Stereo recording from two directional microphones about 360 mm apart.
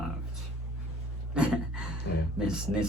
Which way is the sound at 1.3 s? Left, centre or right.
Centre.